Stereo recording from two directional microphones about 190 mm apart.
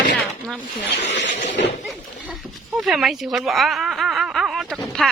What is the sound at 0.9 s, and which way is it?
Speech, 70° left (ahead or behind).